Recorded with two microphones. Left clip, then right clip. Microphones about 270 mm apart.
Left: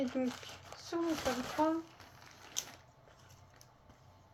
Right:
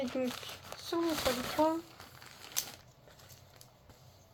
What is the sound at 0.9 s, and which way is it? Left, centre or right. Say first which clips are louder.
Speech: right 3 dB; right.